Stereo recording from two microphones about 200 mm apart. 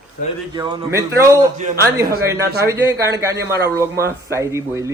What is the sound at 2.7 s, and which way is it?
Speech, 15° right (ahead or behind).